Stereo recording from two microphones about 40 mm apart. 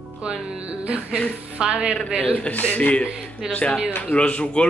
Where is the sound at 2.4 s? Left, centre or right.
Left.